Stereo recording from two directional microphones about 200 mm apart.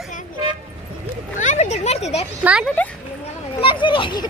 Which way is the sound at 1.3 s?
40° left (ahead or behind).